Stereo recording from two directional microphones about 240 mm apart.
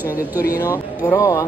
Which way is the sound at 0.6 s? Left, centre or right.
Centre.